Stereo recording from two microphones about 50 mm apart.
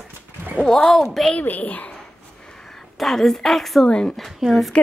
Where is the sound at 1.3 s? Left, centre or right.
Left.